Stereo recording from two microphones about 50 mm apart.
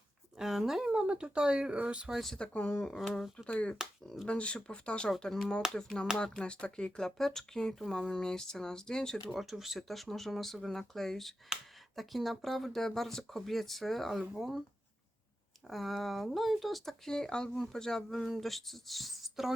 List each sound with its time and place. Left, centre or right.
0.3 s speech: centre
2.1 s speech: centre
2.4 s speech: left
4.0 s speech: centre
4.3 s speech: left
9.3 s speech: centre
15.6 s speech: centre
17.1 s speech: centre